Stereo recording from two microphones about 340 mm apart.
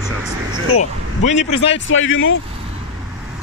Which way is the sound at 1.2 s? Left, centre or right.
Centre.